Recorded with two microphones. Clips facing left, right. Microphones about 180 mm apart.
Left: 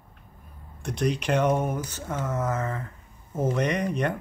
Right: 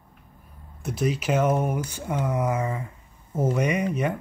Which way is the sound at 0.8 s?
5° right (ahead or behind).